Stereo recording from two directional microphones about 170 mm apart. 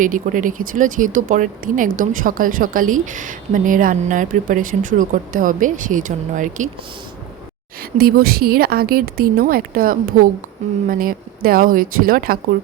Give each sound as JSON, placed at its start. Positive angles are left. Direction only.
{"t": 0.0, "sound": "speech", "side_deg": -50}
{"t": 7.9, "sound": "a woman's voice", "side_deg": -65}